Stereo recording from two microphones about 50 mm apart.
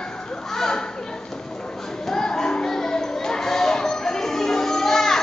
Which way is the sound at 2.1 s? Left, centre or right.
Centre.